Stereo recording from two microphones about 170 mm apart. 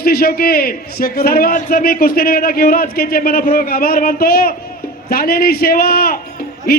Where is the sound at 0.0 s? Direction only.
65° left (ahead or behind).